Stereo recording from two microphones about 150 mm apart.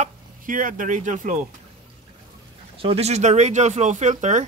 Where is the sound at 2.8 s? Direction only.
45° right (ahead or behind).